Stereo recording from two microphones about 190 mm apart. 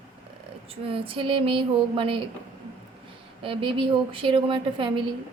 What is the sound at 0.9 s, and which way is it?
A woman's voice, 30° right (ahead or behind).